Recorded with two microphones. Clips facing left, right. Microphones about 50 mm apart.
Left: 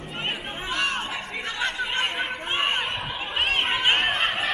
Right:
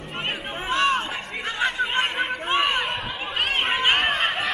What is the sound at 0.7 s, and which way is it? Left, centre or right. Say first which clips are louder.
Chatter: right 5 dB; right.